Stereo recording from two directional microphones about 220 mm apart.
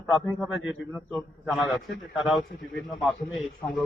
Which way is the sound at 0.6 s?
60° left (ahead or behind).